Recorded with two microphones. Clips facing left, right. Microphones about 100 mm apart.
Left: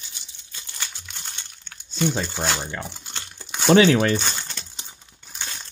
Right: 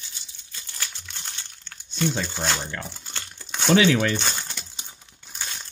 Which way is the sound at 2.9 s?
15° left (ahead or behind).